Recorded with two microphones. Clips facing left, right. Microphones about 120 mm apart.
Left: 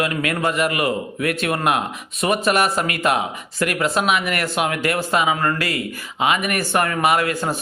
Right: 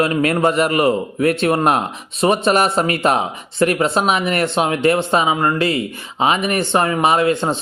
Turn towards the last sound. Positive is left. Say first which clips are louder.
# right 4 dB
turn(degrees=-25)  # may be behind; listen again after turning